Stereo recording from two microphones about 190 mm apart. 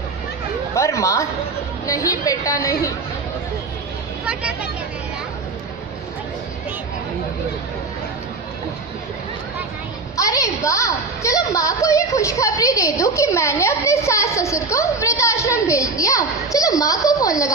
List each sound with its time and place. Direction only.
0.7 s a woman's voice: 15° left (ahead or behind)
4.3 s speech: 5° right (ahead or behind)
10.1 s a woman's voice: 15° left (ahead or behind)